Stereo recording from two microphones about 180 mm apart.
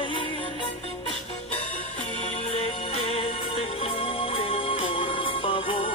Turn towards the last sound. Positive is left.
turn(degrees=30)  # may be behind; listen again after turning